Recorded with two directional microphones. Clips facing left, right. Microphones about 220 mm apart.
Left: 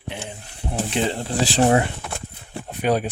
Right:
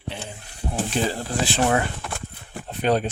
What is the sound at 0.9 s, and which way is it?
Speech, 25° left (ahead or behind).